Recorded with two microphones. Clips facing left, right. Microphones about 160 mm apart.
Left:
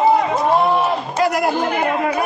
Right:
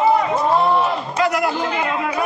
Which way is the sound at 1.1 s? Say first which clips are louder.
Left 2 dB; 40° left (ahead or behind).